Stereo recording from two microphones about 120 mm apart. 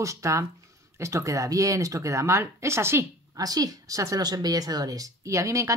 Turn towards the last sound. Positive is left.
turn(degrees=-25)  # may be behind; listen again after turning